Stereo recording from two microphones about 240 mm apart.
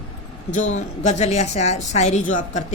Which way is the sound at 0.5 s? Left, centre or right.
Left.